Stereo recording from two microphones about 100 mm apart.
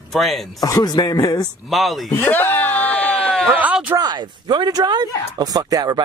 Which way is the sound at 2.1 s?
20° left (ahead or behind).